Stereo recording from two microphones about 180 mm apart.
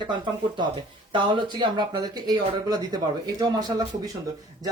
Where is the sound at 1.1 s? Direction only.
25° right (ahead or behind).